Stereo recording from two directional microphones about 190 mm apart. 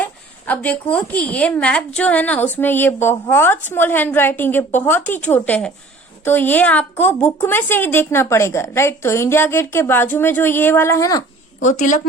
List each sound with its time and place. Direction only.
0.0 s a woman's voice: 10° left (ahead or behind)
11.6 s a woman's voice: 40° left (ahead or behind)